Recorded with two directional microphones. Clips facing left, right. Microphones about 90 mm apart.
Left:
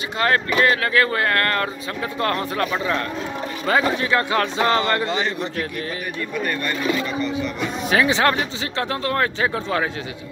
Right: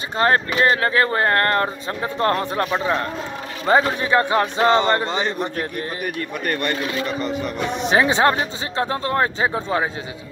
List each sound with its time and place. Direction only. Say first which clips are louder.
0.2 s speech: right 1 dB; 30° right (ahead or behind)
5.4 s a man's voice: right 1 dB; 40° right (ahead or behind)
7.9 s speech: right 1 dB; 25° right (ahead or behind)